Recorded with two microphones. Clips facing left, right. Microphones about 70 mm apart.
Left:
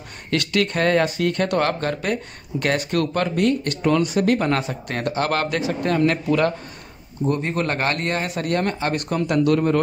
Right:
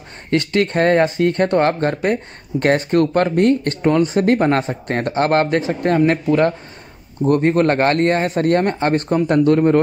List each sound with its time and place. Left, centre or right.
0.3 s speech: right
7.2 s speech: right